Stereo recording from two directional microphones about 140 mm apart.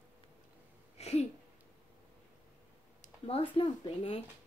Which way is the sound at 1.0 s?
50° left (ahead or behind).